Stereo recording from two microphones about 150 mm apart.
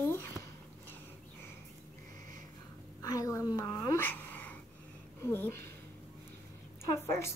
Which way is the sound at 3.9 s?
10° left (ahead or behind).